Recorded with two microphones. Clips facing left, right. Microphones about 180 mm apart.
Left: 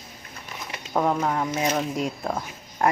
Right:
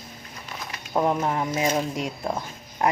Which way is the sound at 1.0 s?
20° right (ahead or behind).